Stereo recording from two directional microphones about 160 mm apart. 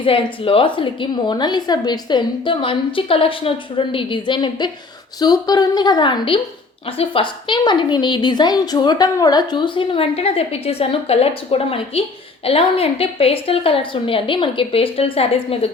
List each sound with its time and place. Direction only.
0.0 s a woman's voice: 35° left (ahead or behind)